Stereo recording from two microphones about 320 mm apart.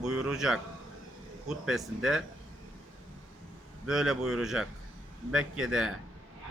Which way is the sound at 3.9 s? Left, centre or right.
Centre.